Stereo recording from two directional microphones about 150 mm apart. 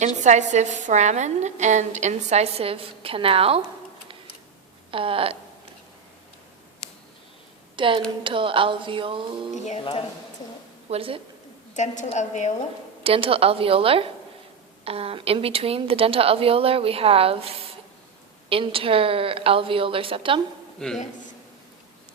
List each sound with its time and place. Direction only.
0.3 s a woman's voice: 55° right (ahead or behind)
4.9 s a woman's voice: 35° right (ahead or behind)
7.8 s a woman's voice: 35° right (ahead or behind)
9.6 s speech: 40° left (ahead or behind)
10.8 s a woman's voice: 40° right (ahead or behind)
11.7 s a woman's voice: 55° left (ahead or behind)
13.0 s a woman's voice: 40° right (ahead or behind)
20.7 s a man's voice: 5° left (ahead or behind)